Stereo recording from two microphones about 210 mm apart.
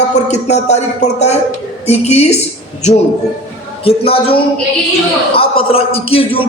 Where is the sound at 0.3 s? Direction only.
30° left (ahead or behind).